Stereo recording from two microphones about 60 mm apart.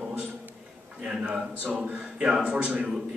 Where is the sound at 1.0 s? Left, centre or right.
Centre.